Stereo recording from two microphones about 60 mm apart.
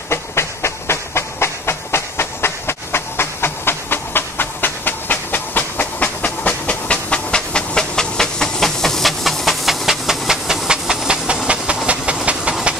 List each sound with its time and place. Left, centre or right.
0.1 s train: left; by 12.5 s centre